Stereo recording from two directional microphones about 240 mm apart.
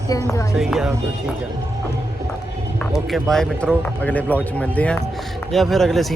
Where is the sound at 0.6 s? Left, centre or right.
Centre.